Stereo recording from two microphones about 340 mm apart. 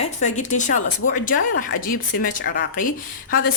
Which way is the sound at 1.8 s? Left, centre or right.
Left.